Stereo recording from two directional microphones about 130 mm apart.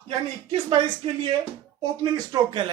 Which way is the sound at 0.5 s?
45° right (ahead or behind).